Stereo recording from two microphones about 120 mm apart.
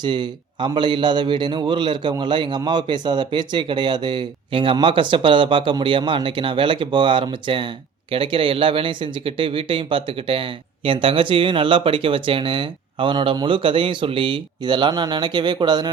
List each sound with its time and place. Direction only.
0.0 s speech: 40° right (ahead or behind)